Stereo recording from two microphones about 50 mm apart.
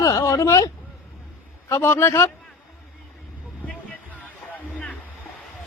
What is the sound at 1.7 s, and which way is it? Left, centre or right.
Speech, left.